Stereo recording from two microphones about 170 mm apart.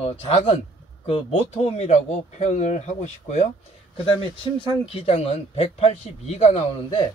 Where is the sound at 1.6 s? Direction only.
40° left (ahead or behind).